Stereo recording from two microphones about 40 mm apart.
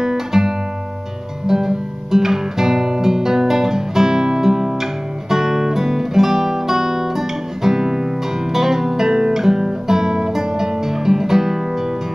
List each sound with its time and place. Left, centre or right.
0.0 s guitar: centre
1.5 s music: centre
8.5 s guitar: centre